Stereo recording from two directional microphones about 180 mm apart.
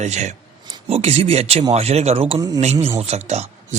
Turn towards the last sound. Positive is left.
turn(degrees=-35)  # may be behind; listen again after turning